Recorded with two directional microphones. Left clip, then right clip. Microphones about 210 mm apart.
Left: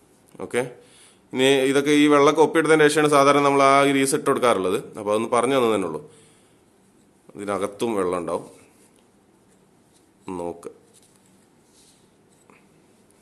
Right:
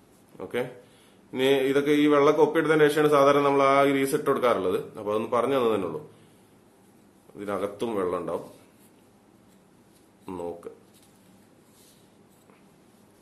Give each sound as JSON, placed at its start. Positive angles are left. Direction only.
{"t": 0.4, "sound": "a man's voice", "side_deg": 40}
{"t": 7.3, "sound": "a man's voice", "side_deg": 35}
{"t": 10.2, "sound": "a man's voice", "side_deg": 35}